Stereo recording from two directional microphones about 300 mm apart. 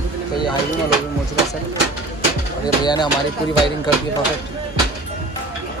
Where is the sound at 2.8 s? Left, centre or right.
Centre.